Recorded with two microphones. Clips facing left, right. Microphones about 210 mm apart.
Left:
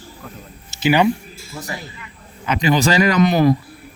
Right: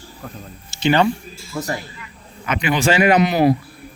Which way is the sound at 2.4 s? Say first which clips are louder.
Left 2 dB; 35° left (ahead or behind).